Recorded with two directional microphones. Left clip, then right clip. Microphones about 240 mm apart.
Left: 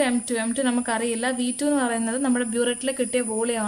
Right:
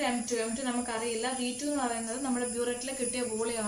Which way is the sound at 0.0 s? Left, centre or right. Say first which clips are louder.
Left 7 dB; left.